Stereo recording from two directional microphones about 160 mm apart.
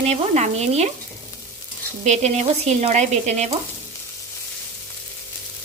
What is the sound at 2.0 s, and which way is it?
Speech, 45° right (ahead or behind).